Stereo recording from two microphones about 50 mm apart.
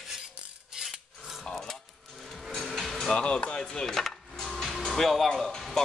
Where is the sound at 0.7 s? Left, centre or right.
Centre.